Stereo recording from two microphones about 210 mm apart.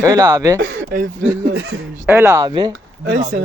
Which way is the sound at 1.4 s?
55° right (ahead or behind).